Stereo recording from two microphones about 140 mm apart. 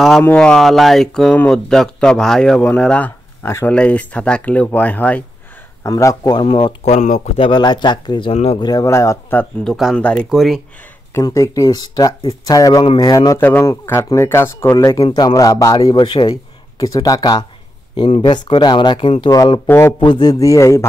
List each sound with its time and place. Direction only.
0.2 s a man's voice: 10° left (ahead or behind)
5.9 s a man's voice: 25° left (ahead or behind)
6.4 s speech: 40° left (ahead or behind); by 7.3 s 55° left (ahead or behind)
7.3 s speech: 35° left (ahead or behind)
8.3 s speech: 45° left (ahead or behind)
8.5 s a man's voice: 30° left (ahead or behind)
9.7 s speech: centre (ahead or behind)
9.9 s speech: 10° left (ahead or behind)
11.1 s a man's voice: 20° left (ahead or behind)
13.4 s a man's voice: 15° left (ahead or behind)
17.9 s speech: 40° left (ahead or behind)
19.3 s a man's voice: 25° left (ahead or behind)
20.0 s a man's voice: 30° left (ahead or behind)